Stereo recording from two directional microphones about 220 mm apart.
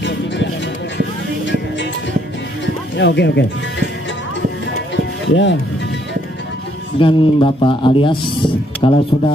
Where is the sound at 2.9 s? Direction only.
50° left (ahead or behind).